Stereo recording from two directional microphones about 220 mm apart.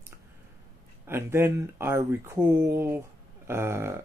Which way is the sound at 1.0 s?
10° right (ahead or behind).